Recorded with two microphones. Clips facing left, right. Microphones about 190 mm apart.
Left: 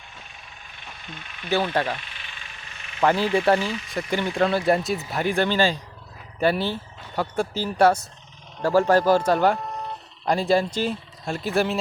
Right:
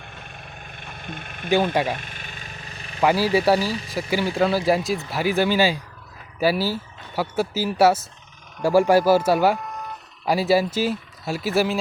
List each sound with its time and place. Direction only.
0.0 s vehicle: 55° right (ahead or behind)
1.7 s speech: 10° right (ahead or behind)
2.0 s vehicle: 45° right (ahead or behind)
3.0 s speech: 10° right (ahead or behind)
3.6 s speech: 35° right (ahead or behind)
4.1 s speech: 5° right (ahead or behind)
9.6 s a sound: 30° left (ahead or behind)
10.2 s speech: 5° right (ahead or behind)